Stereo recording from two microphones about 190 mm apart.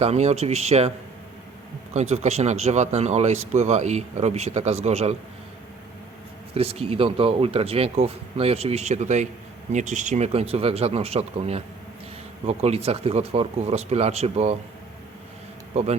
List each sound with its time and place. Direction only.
0.0 s speech: 35° right (ahead or behind)
6.5 s speech: 30° right (ahead or behind)
15.7 s speech: 35° right (ahead or behind)